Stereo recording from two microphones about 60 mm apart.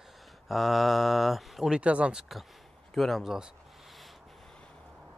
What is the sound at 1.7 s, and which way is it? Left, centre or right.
Speech, centre.